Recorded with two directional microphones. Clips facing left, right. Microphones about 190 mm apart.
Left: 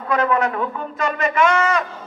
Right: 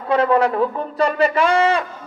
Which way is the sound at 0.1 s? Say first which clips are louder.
Right 3 dB; 30° right (ahead or behind).